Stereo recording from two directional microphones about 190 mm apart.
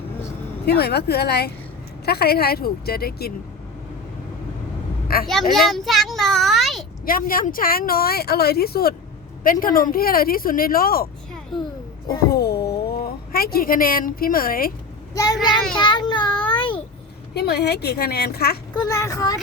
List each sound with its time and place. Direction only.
0.8 s a woman's voice: 60° left (ahead or behind)
5.0 s speech: 50° left (ahead or behind)
5.3 s a child's voice: centre (ahead or behind)
7.0 s speech: 50° left (ahead or behind)
11.5 s a child's voice: 20° left (ahead or behind)
12.3 s speech: 55° left (ahead or behind)
15.1 s a child's voice: 20° left (ahead or behind)
15.7 s child singing: 25° left (ahead or behind)
16.5 s babbling: 25° left (ahead or behind)
17.3 s a woman's voice: 60° left (ahead or behind)
18.7 s a woman's voice: 15° left (ahead or behind)